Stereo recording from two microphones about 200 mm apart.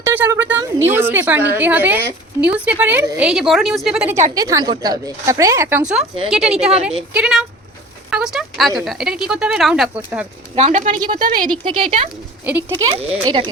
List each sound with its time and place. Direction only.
0.0 s a woman's voice: 10° right (ahead or behind)
4.4 s a woman's voice: 20° right (ahead or behind)
6.3 s speech: centre (ahead or behind)
10.5 s speech: 35° right (ahead or behind)
11.4 s speech: 25° right (ahead or behind)
12.5 s a woman's voice: 10° right (ahead or behind)
12.7 s speech: 30° right (ahead or behind)